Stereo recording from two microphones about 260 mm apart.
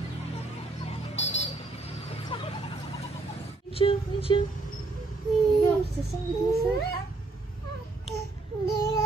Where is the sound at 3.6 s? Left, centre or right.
Left.